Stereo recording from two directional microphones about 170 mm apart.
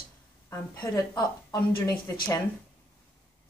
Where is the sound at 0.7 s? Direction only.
20° left (ahead or behind).